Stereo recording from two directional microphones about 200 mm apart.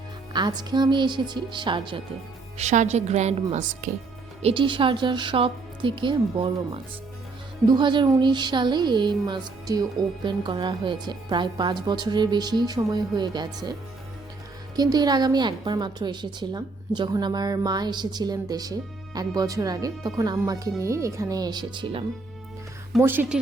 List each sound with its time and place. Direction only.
0.3 s speech: 20° right (ahead or behind)
2.6 s a woman's voice: 35° right (ahead or behind)
4.4 s speech: 25° right (ahead or behind)
7.7 s speech: 25° right (ahead or behind)
14.8 s speech: 20° right (ahead or behind)
23.0 s speech: 10° right (ahead or behind)